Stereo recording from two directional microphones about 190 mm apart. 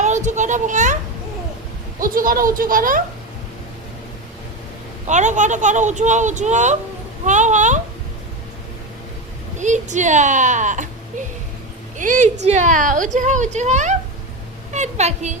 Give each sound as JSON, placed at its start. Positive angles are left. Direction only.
{"t": 0.0, "sound": "a child's voice", "side_deg": -40}
{"t": 2.0, "sound": "speech", "side_deg": -45}
{"t": 5.0, "sound": "speech", "side_deg": -40}
{"t": 9.6, "sound": "speech", "side_deg": -40}
{"t": 11.9, "sound": "a woman's voice", "side_deg": -40}